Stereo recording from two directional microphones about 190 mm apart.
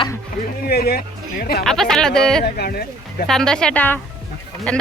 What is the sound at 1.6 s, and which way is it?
Speech, centre (ahead or behind).